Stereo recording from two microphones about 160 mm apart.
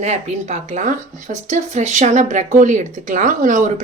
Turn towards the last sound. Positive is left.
turn(degrees=-50)  # may be behind; listen again after turning